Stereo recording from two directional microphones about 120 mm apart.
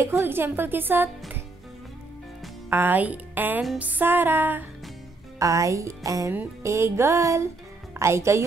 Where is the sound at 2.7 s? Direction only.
15° right (ahead or behind).